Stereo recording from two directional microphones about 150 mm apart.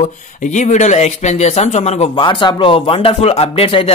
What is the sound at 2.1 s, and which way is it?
Speech, 30° left (ahead or behind).